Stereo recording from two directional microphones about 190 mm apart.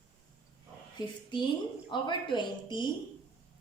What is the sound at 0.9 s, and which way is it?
Speech, 25° left (ahead or behind).